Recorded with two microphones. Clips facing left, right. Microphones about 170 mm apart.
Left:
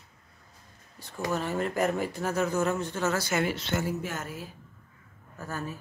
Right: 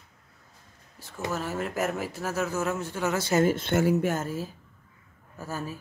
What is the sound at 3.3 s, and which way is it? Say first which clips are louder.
Speech: right 5 dB; 45° right (ahead or behind).